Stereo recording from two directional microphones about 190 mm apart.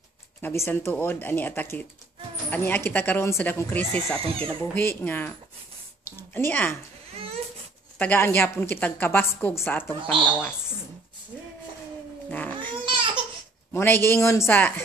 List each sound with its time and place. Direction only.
0.4 s a woman's voice: 10° left (ahead or behind)
7.2 s a sound: 30° right (ahead or behind)
8.0 s a woman's voice: 10° left (ahead or behind)
12.3 s cat: 10° left (ahead or behind)
12.8 s a sound: 25° right (ahead or behind)
13.7 s a woman's voice: 10° left (ahead or behind)